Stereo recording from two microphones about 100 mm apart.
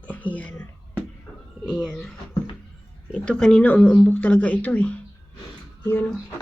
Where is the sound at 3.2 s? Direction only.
10° left (ahead or behind).